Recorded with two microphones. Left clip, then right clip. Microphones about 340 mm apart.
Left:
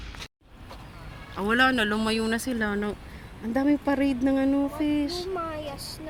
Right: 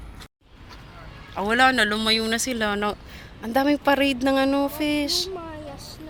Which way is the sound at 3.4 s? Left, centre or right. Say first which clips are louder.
Right 5 dB; right.